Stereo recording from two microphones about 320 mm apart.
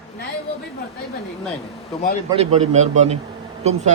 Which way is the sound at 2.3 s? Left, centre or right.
Centre.